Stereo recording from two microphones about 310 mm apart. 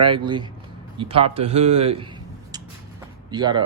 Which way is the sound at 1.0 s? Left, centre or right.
Centre.